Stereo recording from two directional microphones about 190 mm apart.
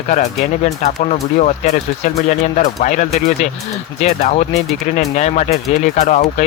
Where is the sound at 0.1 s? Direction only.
40° left (ahead or behind).